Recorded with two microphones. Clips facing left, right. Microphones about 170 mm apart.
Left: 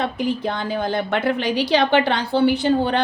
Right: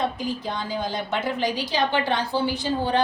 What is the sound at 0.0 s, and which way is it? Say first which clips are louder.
A woman's voice: left 4 dB; 65° left (ahead or behind).